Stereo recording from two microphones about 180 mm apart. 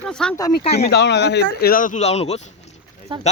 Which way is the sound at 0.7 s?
65° left (ahead or behind).